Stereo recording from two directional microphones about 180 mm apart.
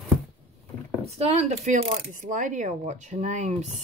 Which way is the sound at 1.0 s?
35° right (ahead or behind).